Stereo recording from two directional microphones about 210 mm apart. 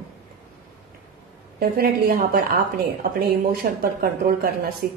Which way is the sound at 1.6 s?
45° right (ahead or behind).